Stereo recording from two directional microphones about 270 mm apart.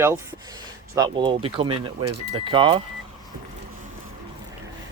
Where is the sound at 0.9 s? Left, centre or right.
Centre.